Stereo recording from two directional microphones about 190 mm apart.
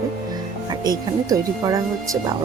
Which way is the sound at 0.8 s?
20° right (ahead or behind).